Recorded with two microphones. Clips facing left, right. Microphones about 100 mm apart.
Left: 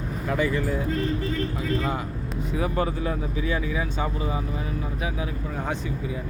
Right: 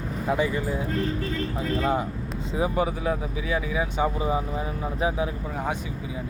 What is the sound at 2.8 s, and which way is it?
Speech, 10° right (ahead or behind).